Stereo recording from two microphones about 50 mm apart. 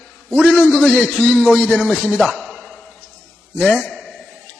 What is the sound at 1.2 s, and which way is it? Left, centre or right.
Speech, centre.